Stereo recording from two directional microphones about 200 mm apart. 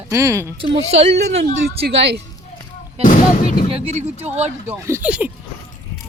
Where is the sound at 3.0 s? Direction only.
40° left (ahead or behind).